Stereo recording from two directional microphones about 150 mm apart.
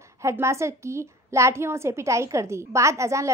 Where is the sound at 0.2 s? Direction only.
20° right (ahead or behind).